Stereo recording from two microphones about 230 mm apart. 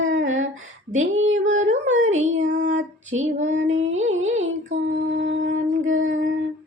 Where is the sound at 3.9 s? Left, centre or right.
Right.